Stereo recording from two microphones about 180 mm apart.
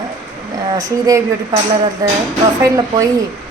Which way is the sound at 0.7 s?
20° right (ahead or behind).